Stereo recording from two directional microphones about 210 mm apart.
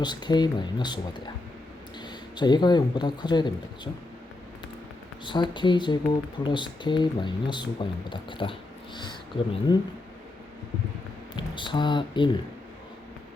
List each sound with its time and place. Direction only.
0.0 s speech: 20° left (ahead or behind)
5.2 s speech: 20° left (ahead or behind)
9.7 s speech: 20° left (ahead or behind)
11.3 s speech: 25° left (ahead or behind)